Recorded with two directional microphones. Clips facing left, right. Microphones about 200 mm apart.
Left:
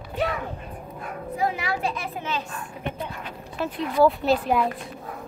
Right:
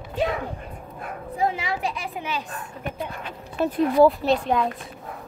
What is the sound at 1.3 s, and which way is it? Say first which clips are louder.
Speech: right 1 dB; 25° right (ahead or behind).